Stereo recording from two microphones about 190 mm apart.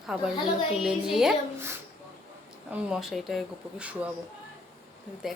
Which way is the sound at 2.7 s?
Centre (ahead or behind).